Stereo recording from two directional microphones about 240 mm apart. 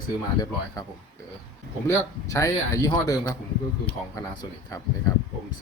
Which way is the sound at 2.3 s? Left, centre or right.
Centre.